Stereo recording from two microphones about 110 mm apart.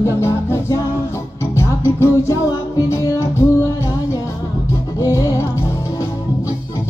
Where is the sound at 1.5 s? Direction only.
25° left (ahead or behind).